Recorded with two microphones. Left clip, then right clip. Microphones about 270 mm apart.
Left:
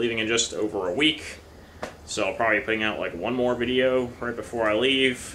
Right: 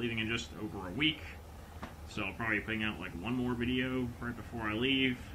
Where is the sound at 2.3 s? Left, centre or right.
Centre.